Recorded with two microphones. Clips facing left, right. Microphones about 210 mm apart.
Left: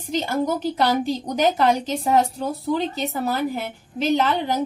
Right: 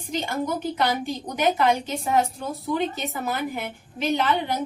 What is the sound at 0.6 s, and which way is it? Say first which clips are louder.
A woman's voice: left 4 dB; 35° left (ahead or behind).